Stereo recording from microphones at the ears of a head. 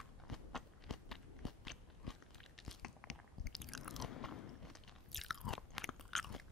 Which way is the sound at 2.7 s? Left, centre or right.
Left.